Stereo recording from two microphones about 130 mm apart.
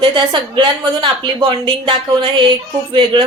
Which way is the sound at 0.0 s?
40° right (ahead or behind).